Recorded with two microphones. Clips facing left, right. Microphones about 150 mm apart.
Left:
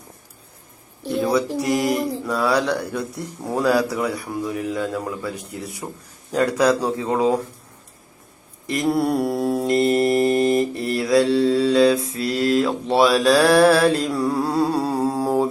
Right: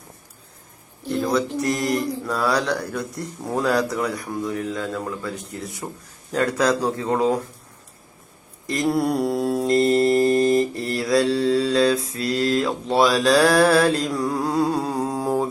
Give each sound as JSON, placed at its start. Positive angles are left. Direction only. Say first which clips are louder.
{"t": 1.1, "sound": "a sound", "louder": "left 2 dB", "side_deg": 5}
{"t": 1.6, "sound": "speech", "louder": "left 2 dB", "side_deg": 5}
{"t": 8.7, "sound": "speech", "louder": "left 1 dB", "side_deg": 0}
{"t": 10.2, "sound": "mantra", "louder": "even", "side_deg": 25}
{"t": 10.6, "sound": "speech", "louder": "left 1 dB", "side_deg": 0}
{"t": 14.3, "sound": "humming", "louder": "left 1 dB", "side_deg": 5}